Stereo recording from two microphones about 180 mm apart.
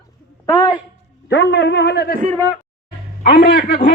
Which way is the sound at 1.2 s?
70° left (ahead or behind).